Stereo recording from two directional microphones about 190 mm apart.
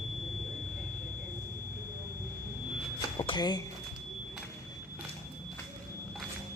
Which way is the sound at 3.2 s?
25° left (ahead or behind).